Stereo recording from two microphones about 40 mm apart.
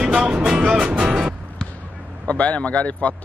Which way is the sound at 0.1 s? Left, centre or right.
Centre.